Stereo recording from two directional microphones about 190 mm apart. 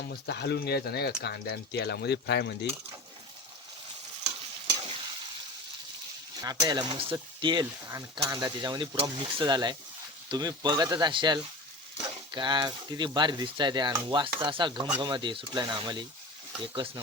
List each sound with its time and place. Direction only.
0.1 s speech: 60° left (ahead or behind)
6.4 s speech: 20° right (ahead or behind)